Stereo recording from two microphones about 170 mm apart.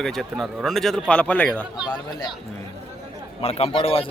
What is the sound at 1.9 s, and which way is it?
Speech, 25° left (ahead or behind).